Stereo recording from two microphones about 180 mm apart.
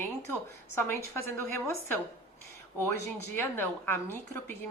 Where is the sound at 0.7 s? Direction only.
15° left (ahead or behind).